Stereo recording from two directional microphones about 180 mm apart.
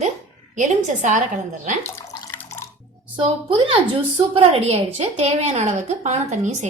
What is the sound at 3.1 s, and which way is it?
A woman's voice, 30° right (ahead or behind).